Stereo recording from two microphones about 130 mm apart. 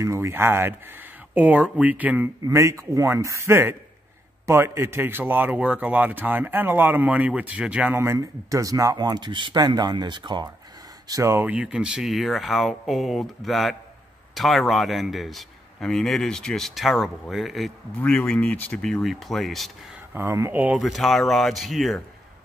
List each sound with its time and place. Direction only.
0.0 s a man's voice: 20° right (ahead or behind)
2.4 s a man's voice: 25° right (ahead or behind)
11.1 s a man's voice: 25° right (ahead or behind)
11.4 s a man's voice: 10° right (ahead or behind)
20.2 s a man's voice: 20° right (ahead or behind)
20.8 s a man's voice: centre (ahead or behind)